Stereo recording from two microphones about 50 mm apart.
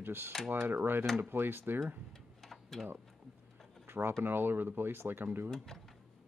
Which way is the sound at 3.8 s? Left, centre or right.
Right.